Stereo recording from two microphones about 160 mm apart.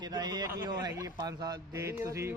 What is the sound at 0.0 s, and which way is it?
A man's voice, 25° right (ahead or behind).